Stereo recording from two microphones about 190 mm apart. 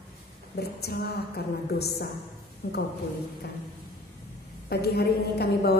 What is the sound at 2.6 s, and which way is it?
Speech, 45° left (ahead or behind).